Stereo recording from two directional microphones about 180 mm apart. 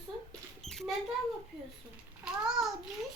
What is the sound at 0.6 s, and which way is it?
Mouse, centre (ahead or behind).